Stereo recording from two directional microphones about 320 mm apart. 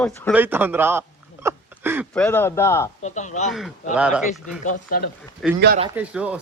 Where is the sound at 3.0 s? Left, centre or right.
Left.